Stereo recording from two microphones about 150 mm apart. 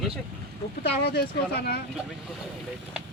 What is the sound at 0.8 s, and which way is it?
Speech, 90° left.